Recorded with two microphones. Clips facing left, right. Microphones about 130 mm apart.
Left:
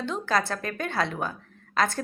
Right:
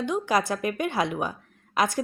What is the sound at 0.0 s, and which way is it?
A woman's voice, 15° right (ahead or behind).